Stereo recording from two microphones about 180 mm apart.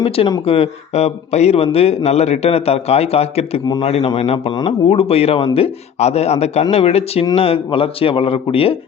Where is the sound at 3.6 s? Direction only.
20° left (ahead or behind).